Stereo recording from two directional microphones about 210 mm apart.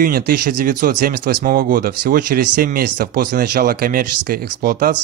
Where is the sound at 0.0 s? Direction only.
45° right (ahead or behind).